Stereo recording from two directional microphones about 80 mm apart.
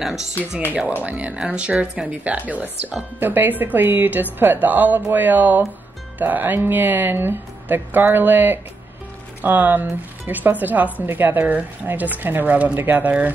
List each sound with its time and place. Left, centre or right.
1.0 s speech: centre